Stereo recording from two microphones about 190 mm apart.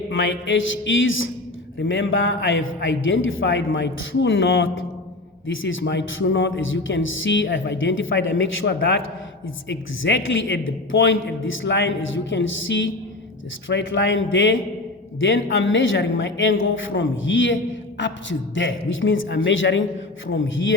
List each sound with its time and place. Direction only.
0.1 s speech: 80° left
1.8 s a man's voice: 80° left
13.7 s a man's voice: 70° left (ahead or behind)
20.2 s a man's voice: 90° left